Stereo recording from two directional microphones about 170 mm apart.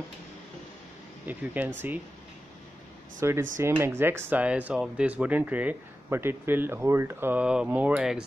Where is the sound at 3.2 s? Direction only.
15° right (ahead or behind).